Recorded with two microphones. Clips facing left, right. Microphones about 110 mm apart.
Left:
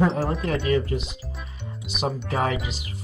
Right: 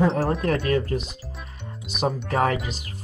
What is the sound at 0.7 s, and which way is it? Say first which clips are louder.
Speech: even; 45° right (ahead or behind).